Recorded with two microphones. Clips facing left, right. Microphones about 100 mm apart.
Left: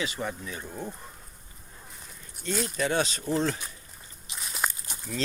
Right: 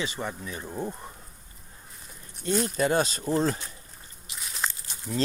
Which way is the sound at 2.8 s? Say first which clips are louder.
Right 1 dB; 40° right (ahead or behind).